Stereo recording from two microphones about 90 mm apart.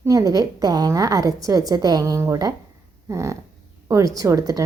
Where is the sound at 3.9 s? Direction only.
40° right (ahead or behind).